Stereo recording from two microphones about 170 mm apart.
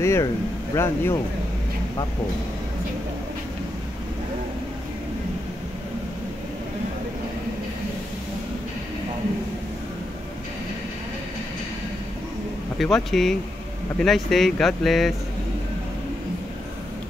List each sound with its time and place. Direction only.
0.0 s speech: 15° left (ahead or behind)
12.7 s speech: centre (ahead or behind)